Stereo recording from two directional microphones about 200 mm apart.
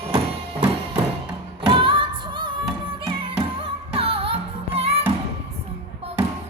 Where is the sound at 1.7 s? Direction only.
25° right (ahead or behind).